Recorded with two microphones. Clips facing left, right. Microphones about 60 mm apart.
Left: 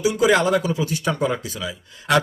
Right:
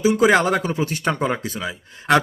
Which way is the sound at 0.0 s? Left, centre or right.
Right.